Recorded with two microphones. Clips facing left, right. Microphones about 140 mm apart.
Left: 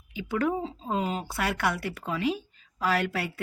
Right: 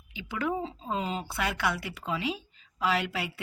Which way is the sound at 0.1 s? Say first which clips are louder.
Left 4 dB; 50° left (ahead or behind).